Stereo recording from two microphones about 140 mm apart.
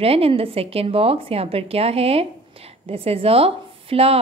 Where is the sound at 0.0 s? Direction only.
45° right (ahead or behind).